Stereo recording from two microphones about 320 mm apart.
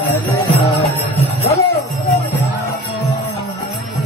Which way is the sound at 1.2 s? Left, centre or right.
Centre.